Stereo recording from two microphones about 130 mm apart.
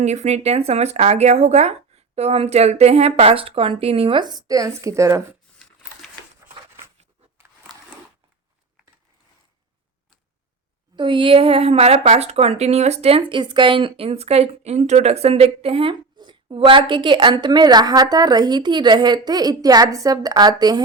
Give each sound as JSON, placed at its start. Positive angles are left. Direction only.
{"t": 0.0, "sound": "a woman's voice", "side_deg": -60}
{"t": 10.9, "sound": "a woman's voice", "side_deg": -40}